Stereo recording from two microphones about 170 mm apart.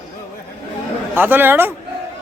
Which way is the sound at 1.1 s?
10° right (ahead or behind).